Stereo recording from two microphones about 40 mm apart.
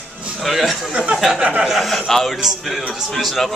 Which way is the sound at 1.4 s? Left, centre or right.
Right.